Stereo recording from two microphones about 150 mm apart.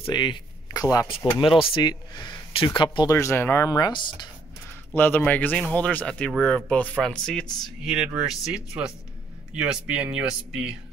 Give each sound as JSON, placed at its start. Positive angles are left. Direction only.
{"t": 0.1, "sound": "speech", "side_deg": 30}
{"t": 3.1, "sound": "speech", "side_deg": 15}
{"t": 4.9, "sound": "speech", "side_deg": 10}